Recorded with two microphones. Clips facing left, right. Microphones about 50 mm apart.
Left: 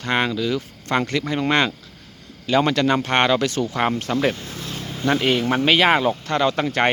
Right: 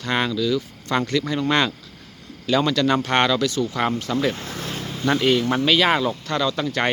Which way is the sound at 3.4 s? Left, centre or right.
Left.